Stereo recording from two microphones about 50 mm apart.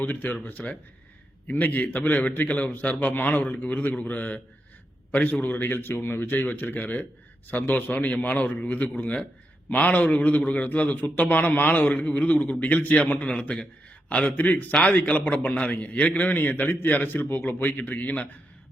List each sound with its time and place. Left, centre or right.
0.0 s a man's voice: left
15.2 s a man's voice: left